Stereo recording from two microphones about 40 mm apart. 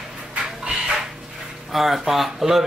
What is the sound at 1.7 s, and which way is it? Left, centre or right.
Speech, centre.